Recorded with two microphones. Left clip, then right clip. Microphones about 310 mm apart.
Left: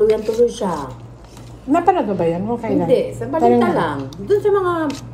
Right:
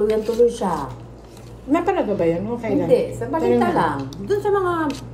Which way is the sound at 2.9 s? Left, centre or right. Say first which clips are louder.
Even; centre.